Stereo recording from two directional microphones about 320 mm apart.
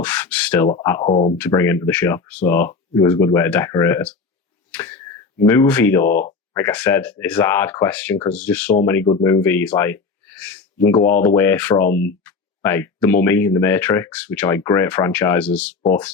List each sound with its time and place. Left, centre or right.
0.0 s speech: centre
1.4 s speech: centre
11.9 s speech: left
12.2 s speech: centre